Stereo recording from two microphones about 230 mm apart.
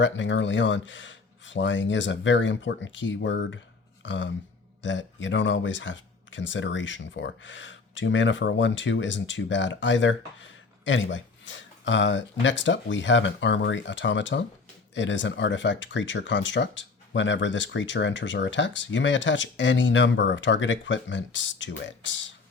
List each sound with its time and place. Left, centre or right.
0.0 s speech: left